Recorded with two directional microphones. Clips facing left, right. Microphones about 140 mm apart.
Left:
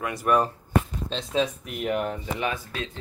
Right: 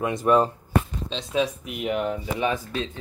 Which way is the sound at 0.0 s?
20° right (ahead or behind).